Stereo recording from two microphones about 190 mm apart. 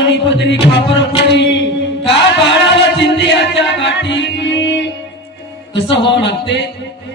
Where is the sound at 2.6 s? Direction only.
70° left (ahead or behind).